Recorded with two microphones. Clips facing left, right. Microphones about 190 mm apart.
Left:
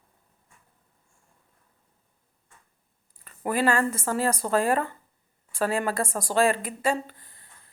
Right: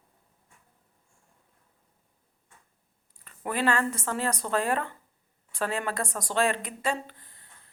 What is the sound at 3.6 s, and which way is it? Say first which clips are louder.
Speech: left 2 dB; 10° left (ahead or behind).